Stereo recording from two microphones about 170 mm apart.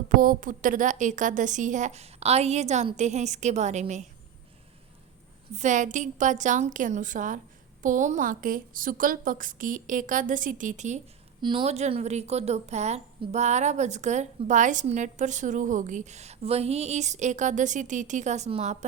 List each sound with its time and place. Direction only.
0.1 s a woman's voice: 50° right (ahead or behind)
5.5 s a woman's voice: 45° right (ahead or behind)
11.3 s a woman's voice: 30° right (ahead or behind)